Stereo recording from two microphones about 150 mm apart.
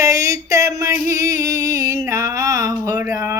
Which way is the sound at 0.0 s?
20° right (ahead or behind).